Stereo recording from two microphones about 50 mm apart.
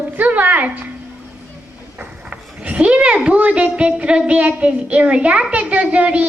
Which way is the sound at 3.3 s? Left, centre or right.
Right.